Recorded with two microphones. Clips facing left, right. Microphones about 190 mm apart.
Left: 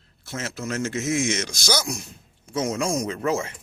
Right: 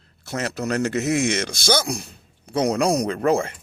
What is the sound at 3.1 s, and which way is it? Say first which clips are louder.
Speech: right 5 dB; 60° right (ahead or behind).